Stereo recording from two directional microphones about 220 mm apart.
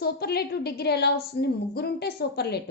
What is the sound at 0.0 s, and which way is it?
Speech, 45° left (ahead or behind).